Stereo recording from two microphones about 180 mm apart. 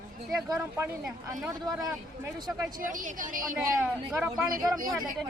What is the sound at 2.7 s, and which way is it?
Speech, 45° right (ahead or behind).